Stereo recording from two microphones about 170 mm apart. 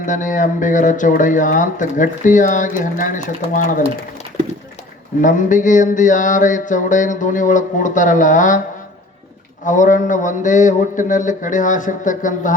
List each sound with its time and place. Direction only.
0.0 s speech: 50° left (ahead or behind)
5.2 s speech: 50° left (ahead or behind)
9.6 s speech: 50° left (ahead or behind)